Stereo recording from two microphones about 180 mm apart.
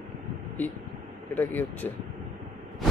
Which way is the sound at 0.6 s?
10° left (ahead or behind).